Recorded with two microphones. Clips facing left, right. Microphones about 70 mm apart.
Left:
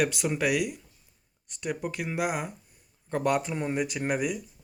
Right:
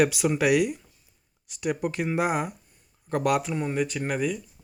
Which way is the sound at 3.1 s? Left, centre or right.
Centre.